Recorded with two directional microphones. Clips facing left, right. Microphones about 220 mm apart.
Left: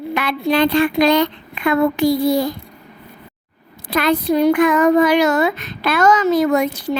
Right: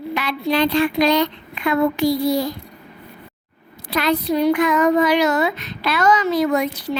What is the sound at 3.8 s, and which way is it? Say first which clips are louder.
Speech: left 3 dB; 50° left (ahead or behind).